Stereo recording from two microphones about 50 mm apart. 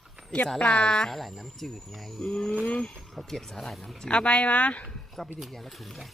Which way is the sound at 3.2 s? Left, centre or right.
Centre.